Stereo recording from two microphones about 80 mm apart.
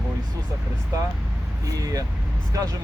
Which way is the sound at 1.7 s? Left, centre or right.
Right.